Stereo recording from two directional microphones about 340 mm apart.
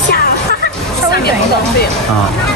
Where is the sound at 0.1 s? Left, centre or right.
Left.